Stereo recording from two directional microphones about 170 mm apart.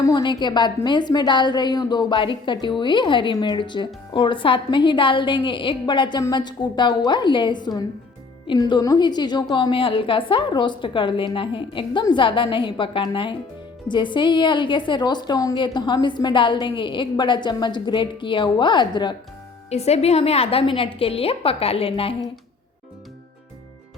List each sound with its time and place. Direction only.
0.0 s a woman's voice: 25° left (ahead or behind)
19.7 s a woman's voice: 40° left (ahead or behind)